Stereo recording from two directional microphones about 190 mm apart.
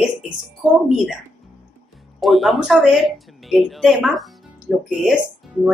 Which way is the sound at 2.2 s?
Centre (ahead or behind).